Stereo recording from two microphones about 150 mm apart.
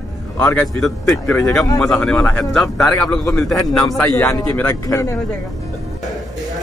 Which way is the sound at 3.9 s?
15° left (ahead or behind).